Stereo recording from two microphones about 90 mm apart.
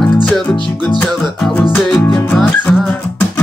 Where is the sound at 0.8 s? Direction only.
15° left (ahead or behind).